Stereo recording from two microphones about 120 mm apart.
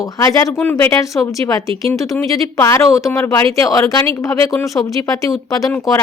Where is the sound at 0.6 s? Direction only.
15° left (ahead or behind).